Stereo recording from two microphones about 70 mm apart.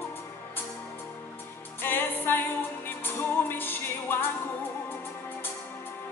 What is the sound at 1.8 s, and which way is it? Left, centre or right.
Music, left.